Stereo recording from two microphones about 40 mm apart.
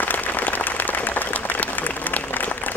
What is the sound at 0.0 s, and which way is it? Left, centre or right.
Applause, left.